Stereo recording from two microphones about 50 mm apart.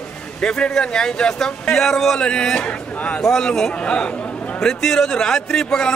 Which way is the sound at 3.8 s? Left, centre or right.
Left.